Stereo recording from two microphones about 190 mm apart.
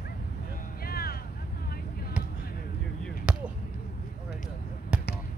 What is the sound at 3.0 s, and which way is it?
Basketball bounce, 5° right (ahead or behind).